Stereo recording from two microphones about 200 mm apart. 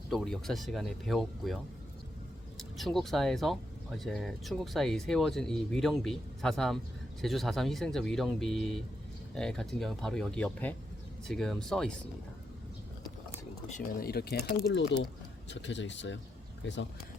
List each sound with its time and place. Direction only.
0.1 s speech: centre (ahead or behind)
2.6 s speech: centre (ahead or behind)
13.7 s speech: 45° left (ahead or behind); by 16.8 s 65° left (ahead or behind)